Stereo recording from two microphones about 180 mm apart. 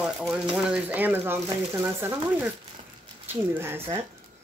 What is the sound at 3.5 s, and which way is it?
Speech, 15° right (ahead or behind).